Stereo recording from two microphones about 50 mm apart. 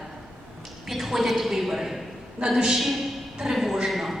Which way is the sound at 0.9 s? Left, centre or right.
Centre.